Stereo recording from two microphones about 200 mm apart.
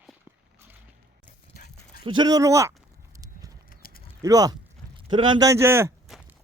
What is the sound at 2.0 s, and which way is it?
Speech, 20° right (ahead or behind).